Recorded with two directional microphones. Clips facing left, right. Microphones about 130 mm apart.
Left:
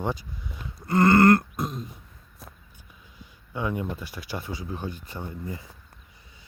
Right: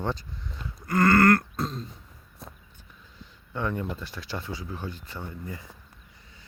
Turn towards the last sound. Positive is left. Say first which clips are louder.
# left 2 dB
turn(degrees=20)  # may be behind; listen again after turning